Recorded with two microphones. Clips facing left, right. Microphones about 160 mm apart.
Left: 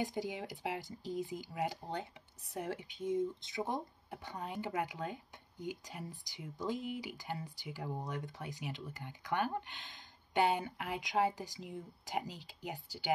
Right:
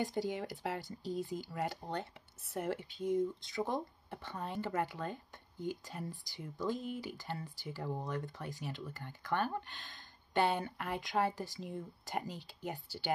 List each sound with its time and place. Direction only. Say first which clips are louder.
0.0 s speech: right 2 dB; 15° left (ahead or behind)